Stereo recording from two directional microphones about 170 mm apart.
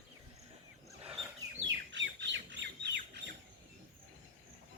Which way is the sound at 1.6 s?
90° right.